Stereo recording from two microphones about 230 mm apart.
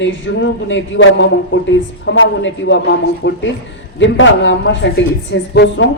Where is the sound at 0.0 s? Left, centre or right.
Left.